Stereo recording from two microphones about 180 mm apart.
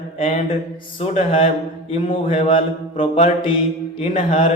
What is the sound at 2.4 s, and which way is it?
Mantra, 30° left (ahead or behind).